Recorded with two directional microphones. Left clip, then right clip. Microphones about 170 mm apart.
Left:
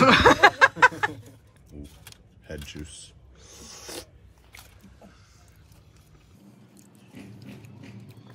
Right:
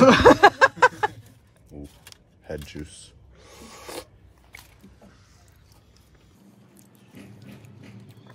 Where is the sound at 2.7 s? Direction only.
45° right (ahead or behind).